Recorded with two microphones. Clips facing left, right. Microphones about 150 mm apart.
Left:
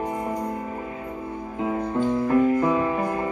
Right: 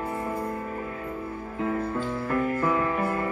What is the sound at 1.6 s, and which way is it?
Music, 15° left (ahead or behind).